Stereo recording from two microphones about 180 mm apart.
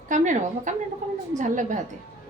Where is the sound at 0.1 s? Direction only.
45° right (ahead or behind).